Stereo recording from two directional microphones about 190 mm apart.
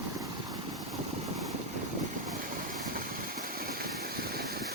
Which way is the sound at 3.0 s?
50° right (ahead or behind).